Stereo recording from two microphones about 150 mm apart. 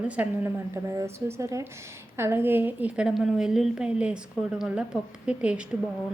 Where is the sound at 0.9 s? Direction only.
20° right (ahead or behind).